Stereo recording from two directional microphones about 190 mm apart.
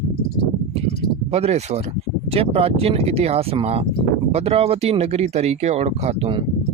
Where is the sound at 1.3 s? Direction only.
35° right (ahead or behind).